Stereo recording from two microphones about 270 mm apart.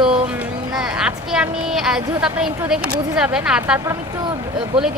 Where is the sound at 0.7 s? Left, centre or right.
Centre.